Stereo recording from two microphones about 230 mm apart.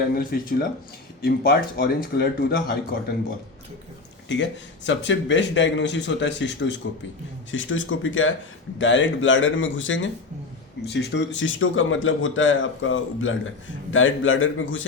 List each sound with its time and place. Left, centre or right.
0.1 s speech: left
4.3 s speech: left